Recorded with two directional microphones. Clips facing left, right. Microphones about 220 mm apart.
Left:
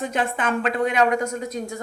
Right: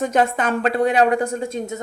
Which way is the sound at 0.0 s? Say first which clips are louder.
Right 5 dB; 40° right (ahead or behind).